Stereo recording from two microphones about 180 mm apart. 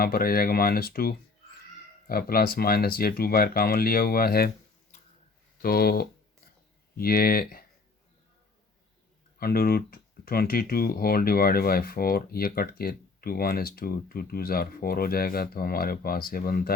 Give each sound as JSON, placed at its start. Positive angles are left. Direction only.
{"t": 0.0, "sound": "speech", "side_deg": 55}
{"t": 5.6, "sound": "speech", "side_deg": 60}
{"t": 9.4, "sound": "speech", "side_deg": 55}